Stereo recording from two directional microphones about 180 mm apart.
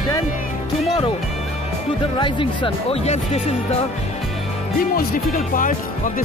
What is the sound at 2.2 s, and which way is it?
Speech, 25° left (ahead or behind).